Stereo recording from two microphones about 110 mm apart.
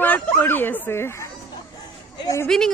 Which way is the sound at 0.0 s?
15° left (ahead or behind).